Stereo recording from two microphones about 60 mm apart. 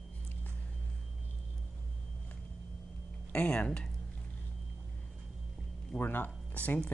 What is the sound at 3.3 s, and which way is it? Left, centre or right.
Speech, left.